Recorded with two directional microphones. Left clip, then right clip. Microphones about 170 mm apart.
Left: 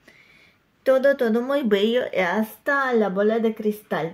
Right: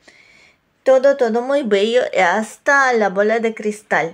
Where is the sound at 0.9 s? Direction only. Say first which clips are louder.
Right 5 dB; 15° left (ahead or behind).